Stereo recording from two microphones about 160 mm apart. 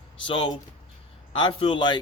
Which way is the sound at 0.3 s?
30° left (ahead or behind).